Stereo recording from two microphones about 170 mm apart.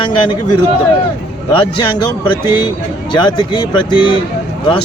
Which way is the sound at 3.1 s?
25° left (ahead or behind).